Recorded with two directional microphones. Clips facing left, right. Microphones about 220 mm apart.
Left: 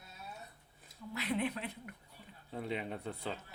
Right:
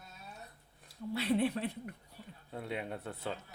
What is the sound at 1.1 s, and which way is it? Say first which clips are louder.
Speech: right 5 dB; 30° right (ahead or behind).